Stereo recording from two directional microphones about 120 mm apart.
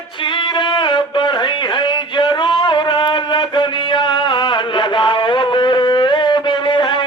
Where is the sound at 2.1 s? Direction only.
40° left (ahead or behind).